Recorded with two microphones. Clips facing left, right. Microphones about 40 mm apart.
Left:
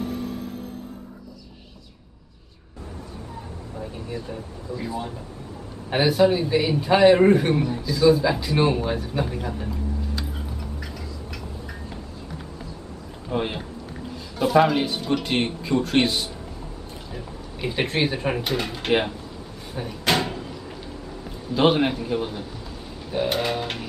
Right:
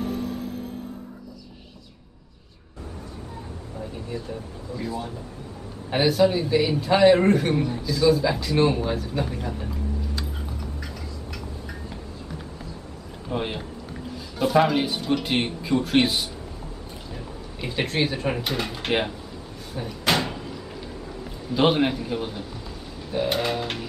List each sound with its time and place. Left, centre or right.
4.7 s a man's voice: centre
10.1 s tick-tock: centre
13.3 s speech: centre
19.7 s speech: centre
20.1 s door: centre
21.2 s a man's voice: centre